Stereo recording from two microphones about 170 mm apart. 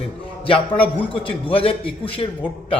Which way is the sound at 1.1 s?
30° left (ahead or behind).